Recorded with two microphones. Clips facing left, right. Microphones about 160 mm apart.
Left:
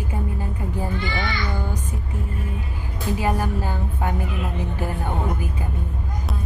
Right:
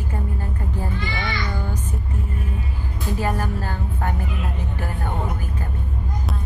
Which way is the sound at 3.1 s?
15° left (ahead or behind).